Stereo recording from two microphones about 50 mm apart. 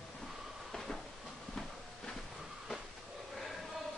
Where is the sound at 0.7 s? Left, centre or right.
Centre.